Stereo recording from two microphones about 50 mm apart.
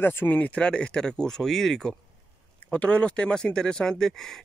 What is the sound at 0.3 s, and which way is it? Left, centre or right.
Speech, left.